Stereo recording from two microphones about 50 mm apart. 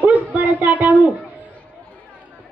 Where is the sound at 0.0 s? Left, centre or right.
Right.